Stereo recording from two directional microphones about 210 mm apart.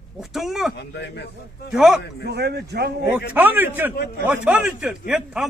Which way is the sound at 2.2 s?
50° right (ahead or behind).